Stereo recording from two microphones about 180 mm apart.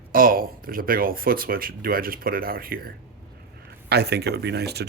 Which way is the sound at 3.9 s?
65° right (ahead or behind).